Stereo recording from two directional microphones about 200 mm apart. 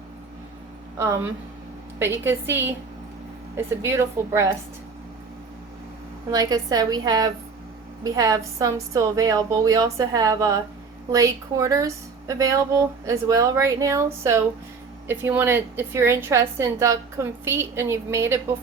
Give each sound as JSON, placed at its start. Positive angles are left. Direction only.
{"t": 0.9, "sound": "a woman's voice", "side_deg": -15}
{"t": 3.8, "sound": "a woman's voice", "side_deg": -15}
{"t": 6.3, "sound": "a woman's voice", "side_deg": -20}